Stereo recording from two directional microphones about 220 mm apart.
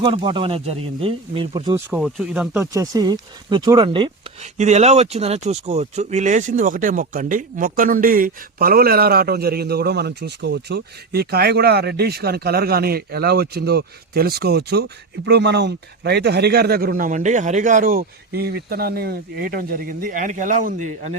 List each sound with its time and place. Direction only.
0.0 s speech: 20° right (ahead or behind)
1.9 s speech: centre (ahead or behind); by 4.1 s 20° right (ahead or behind)
4.5 s speech: 30° right (ahead or behind)